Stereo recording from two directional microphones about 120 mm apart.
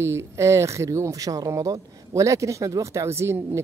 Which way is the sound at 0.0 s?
25° right (ahead or behind).